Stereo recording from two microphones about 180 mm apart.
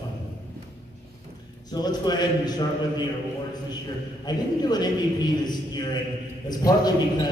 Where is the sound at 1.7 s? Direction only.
25° left (ahead or behind).